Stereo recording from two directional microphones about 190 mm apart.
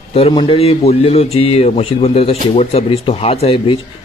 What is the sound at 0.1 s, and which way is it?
A man's voice, 30° left (ahead or behind).